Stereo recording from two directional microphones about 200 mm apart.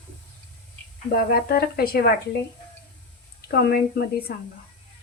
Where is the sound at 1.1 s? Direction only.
50° left (ahead or behind).